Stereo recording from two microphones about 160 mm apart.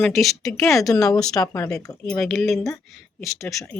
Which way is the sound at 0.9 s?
20° left (ahead or behind).